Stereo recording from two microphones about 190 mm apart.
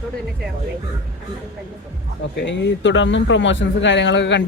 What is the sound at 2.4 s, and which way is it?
Speech, 75° left (ahead or behind).